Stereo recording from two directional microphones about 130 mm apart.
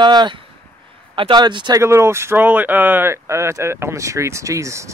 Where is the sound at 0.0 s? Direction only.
35° right (ahead or behind).